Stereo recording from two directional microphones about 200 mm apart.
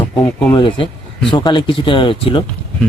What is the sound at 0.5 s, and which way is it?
Speech, 25° left (ahead or behind).